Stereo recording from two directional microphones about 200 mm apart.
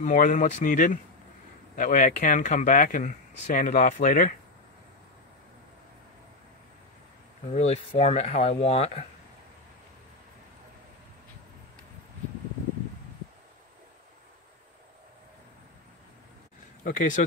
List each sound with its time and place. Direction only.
0.0 s speech: 40° left (ahead or behind)
7.4 s speech: 30° left (ahead or behind)
16.8 s speech: 40° left (ahead or behind)